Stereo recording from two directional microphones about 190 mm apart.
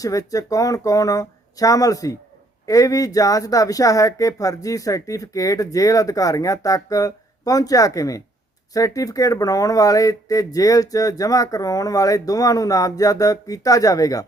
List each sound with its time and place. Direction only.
0.0 s speech: 15° left (ahead or behind)